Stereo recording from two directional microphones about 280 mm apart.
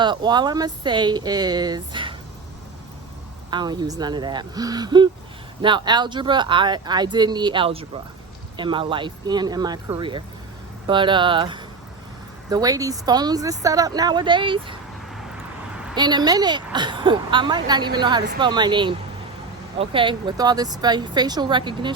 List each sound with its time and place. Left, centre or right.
0.0 s speech: centre
3.5 s speech: centre
16.0 s speech: centre